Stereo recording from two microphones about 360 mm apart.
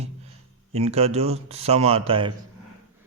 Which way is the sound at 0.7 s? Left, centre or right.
Centre.